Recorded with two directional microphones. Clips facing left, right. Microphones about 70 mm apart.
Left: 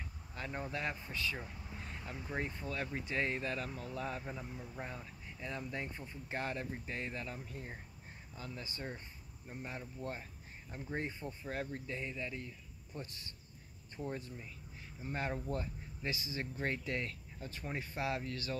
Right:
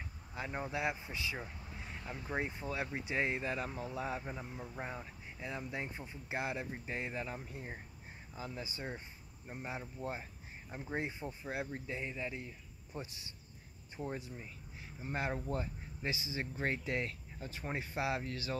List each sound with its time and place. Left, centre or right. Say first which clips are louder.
0.3 s speech: right 2 dB; centre
1.7 s vehicle: right 1 dB; centre
2.2 s speech: right 2 dB; centre